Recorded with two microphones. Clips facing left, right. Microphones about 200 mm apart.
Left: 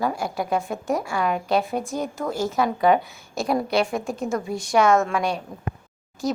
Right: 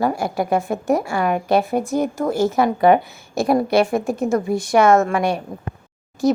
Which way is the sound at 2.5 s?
60° right (ahead or behind).